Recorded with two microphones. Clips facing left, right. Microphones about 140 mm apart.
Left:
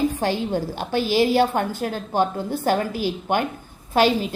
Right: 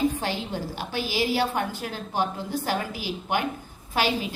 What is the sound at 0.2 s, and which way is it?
A woman's voice, 50° left (ahead or behind).